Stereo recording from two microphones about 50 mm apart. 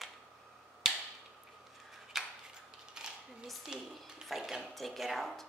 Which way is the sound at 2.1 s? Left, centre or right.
Centre.